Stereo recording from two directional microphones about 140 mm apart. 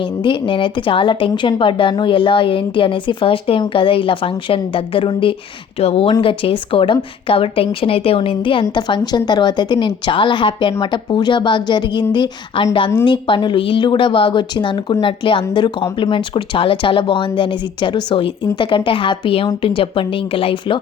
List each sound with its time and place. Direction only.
0.0 s a woman's voice: 35° left (ahead or behind)